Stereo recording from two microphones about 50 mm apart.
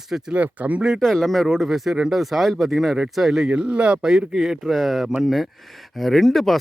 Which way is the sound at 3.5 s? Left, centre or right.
Centre.